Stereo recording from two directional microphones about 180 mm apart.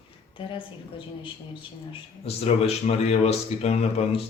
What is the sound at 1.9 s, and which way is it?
Speech, 35° left (ahead or behind).